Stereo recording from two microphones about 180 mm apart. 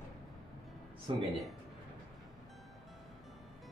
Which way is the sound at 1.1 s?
25° right (ahead or behind).